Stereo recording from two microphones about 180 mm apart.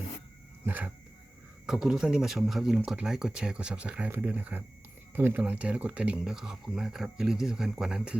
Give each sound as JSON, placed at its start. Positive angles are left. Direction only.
{"t": 0.6, "sound": "speech", "side_deg": -10}